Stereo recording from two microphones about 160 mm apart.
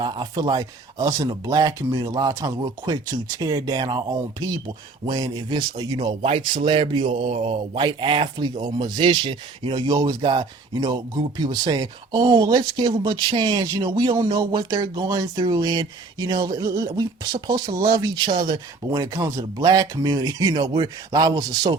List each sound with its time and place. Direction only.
0.0 s speech: 25° right (ahead or behind)